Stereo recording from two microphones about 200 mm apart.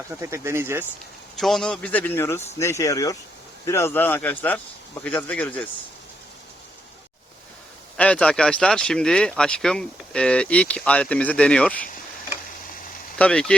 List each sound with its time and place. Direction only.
0.2 s speech: 15° right (ahead or behind)
1.4 s speech: centre (ahead or behind)
7.9 s speech: 5° left (ahead or behind)
13.1 s speech: 5° left (ahead or behind)